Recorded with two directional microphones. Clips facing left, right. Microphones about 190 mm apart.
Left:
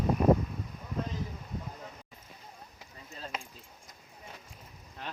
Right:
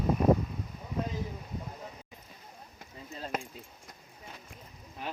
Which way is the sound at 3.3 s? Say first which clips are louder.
Right 6 dB; 50° right (ahead or behind).